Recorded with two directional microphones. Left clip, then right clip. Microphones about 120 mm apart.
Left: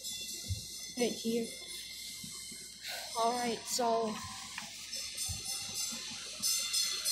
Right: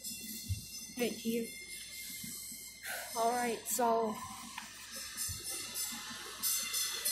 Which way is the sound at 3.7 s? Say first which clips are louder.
Even; 15° right (ahead or behind).